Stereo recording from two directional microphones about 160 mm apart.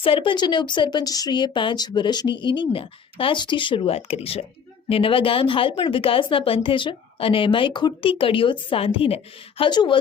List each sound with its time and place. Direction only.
0.0 s speech: 35° left (ahead or behind)